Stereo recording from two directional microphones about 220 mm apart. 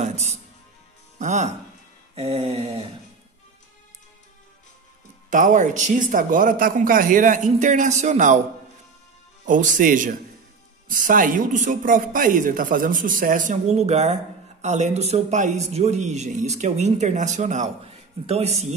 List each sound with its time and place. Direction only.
0.0 s music: 30° right (ahead or behind)
1.2 s speech: 30° right (ahead or behind)
2.1 s a sound: 25° right (ahead or behind)
5.3 s speech: 35° right (ahead or behind)
9.5 s speech: 35° right (ahead or behind)